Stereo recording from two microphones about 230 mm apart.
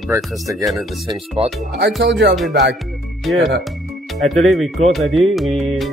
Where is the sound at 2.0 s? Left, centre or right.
Right.